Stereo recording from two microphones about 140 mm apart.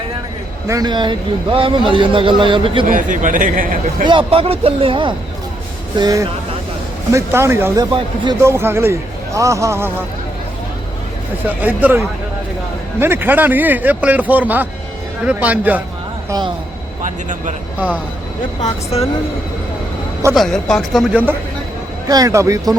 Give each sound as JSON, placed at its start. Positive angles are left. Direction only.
{"t": 0.7, "sound": "speech", "side_deg": -30}
{"t": 2.8, "sound": "a man's voice", "side_deg": -70}
{"t": 4.0, "sound": "speech", "side_deg": -35}
{"t": 6.0, "sound": "a man's voice", "side_deg": -25}
{"t": 7.9, "sound": "speech", "side_deg": -35}
{"t": 8.4, "sound": "a man's voice", "side_deg": -20}
{"t": 11.4, "sound": "speech", "side_deg": -10}
{"t": 17.7, "sound": "speech", "side_deg": -10}
{"t": 18.6, "sound": "speech", "side_deg": 45}
{"t": 20.3, "sound": "speech", "side_deg": 5}
{"t": 22.1, "sound": "a man's voice", "side_deg": -25}